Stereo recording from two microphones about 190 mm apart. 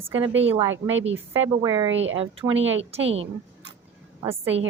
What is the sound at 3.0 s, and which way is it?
Speech, 90° right.